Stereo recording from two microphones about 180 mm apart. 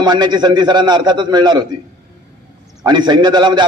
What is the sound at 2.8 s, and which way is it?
Speech, 25° right (ahead or behind).